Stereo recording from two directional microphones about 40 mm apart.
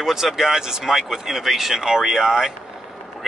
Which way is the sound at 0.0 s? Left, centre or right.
Centre.